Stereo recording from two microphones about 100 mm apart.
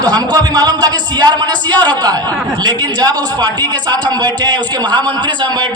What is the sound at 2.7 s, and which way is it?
A man's voice, 45° right (ahead or behind).